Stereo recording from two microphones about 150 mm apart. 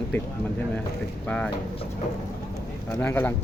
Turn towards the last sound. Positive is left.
turn(degrees=10)  # may be behind; listen again after turning